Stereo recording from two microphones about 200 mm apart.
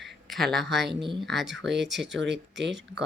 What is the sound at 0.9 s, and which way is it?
Speech, 25° right (ahead or behind).